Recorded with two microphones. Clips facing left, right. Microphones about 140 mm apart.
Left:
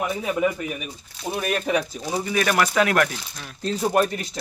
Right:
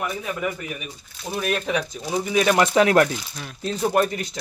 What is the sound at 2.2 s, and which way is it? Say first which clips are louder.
Speech: right 3 dB; 20° right (ahead or behind).